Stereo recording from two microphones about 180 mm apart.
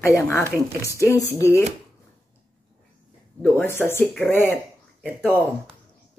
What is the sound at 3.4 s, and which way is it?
Speech, 10° left (ahead or behind).